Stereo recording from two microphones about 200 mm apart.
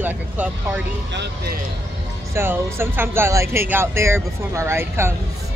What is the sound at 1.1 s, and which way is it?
Speech, 55° right (ahead or behind).